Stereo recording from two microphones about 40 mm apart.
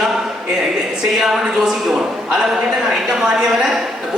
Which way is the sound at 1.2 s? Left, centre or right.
Centre.